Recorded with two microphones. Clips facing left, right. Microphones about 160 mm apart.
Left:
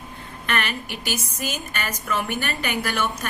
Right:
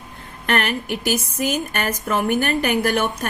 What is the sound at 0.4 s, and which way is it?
Speech, 55° right (ahead or behind).